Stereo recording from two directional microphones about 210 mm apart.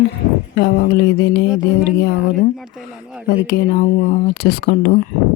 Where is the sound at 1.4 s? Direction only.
5° right (ahead or behind).